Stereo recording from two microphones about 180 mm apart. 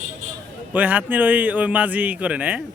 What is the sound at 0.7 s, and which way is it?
A man's voice, 10° right (ahead or behind).